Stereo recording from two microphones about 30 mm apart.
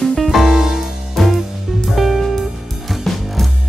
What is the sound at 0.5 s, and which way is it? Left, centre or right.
Music, centre.